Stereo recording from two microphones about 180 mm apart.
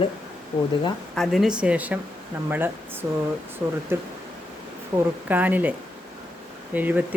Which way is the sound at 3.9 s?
15° right (ahead or behind).